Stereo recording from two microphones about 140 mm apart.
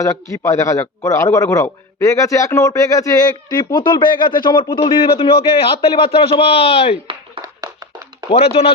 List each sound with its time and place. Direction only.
0.0 s speech: 25° left (ahead or behind)
4.9 s a man's voice: 40° left (ahead or behind)
7.4 s a sound: 25° right (ahead or behind)
8.3 s speech: 45° left (ahead or behind)